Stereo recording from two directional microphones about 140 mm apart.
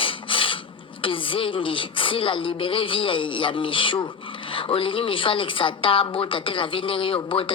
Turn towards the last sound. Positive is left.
turn(degrees=40)  # may be behind; listen again after turning